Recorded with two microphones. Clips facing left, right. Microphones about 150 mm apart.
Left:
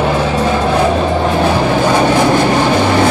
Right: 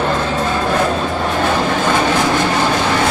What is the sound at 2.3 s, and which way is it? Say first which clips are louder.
Vehicle: left 4 dB; 15° left (ahead or behind).